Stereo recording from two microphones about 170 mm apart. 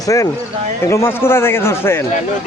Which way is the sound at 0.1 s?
20° left (ahead or behind).